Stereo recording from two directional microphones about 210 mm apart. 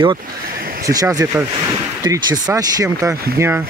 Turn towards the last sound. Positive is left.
turn(degrees=-15)  # may be behind; listen again after turning